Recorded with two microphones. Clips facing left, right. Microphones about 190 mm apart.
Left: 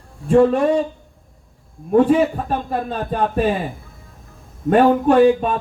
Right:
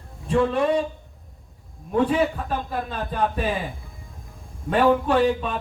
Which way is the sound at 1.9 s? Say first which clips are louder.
Left 7 dB; 50° left (ahead or behind).